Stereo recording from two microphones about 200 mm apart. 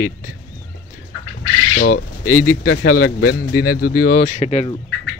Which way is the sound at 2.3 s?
90° left.